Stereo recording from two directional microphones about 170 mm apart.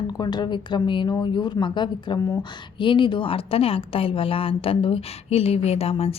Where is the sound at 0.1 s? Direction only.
25° left (ahead or behind).